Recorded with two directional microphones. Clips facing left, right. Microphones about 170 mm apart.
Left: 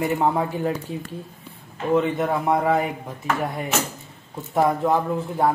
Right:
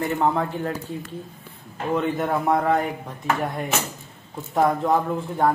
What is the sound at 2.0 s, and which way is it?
Speech, centre (ahead or behind).